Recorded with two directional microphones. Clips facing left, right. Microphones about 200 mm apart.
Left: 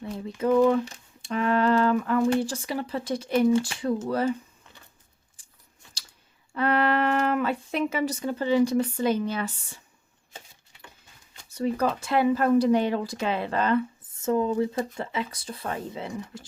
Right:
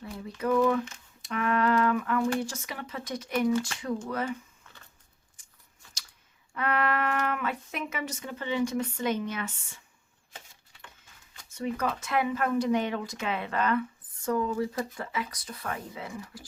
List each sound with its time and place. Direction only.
0.0 s a sound: 25° left (ahead or behind)
4.0 s speech: 30° left (ahead or behind)
5.4 s scissors: 30° left (ahead or behind)
6.5 s speech: 30° left (ahead or behind)
11.4 s speech: 35° left (ahead or behind)